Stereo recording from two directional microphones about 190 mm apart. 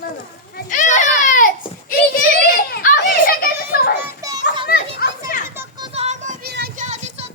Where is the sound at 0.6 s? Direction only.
40° left (ahead or behind).